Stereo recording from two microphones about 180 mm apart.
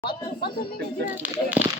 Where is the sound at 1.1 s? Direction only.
10° right (ahead or behind).